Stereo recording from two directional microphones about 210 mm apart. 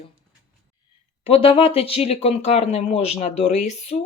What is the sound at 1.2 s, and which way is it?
Speech, 25° left (ahead or behind).